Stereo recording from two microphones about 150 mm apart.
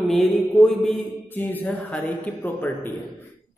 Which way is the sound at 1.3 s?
15° left (ahead or behind).